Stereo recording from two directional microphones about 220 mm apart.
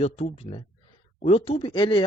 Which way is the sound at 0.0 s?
30° left (ahead or behind).